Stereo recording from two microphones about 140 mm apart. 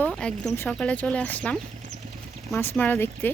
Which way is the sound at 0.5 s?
15° left (ahead or behind).